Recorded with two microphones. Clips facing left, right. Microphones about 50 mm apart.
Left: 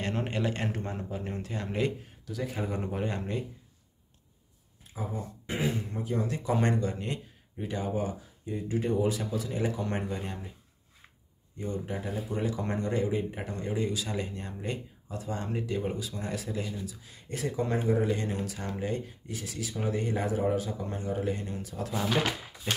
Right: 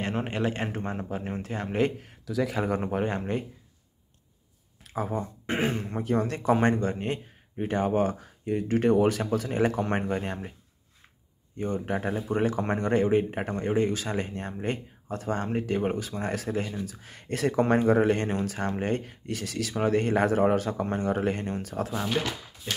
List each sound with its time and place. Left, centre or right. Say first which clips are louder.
0.0 s a man's voice: right 3 dB; right
2.0 s speech: right 8 dB; right
2.8 s speech: right 5 dB; right
4.8 s speech: right 7 dB; right
6.5 s speech: right 5 dB; right
11.5 s speech: right 5 dB; right
22.2 s speech: left 1 dB; centre